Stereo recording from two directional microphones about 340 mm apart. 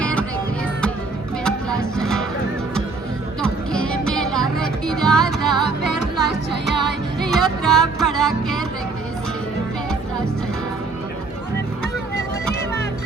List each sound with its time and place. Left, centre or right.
0.0 s music: centre
1.5 s music: centre
3.4 s music: centre
5.6 s music: right
7.2 s music: centre